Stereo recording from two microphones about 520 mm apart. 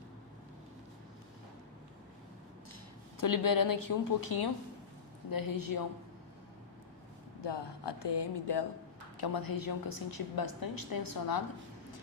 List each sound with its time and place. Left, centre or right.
3.2 s a woman's voice: left
7.4 s a woman's voice: left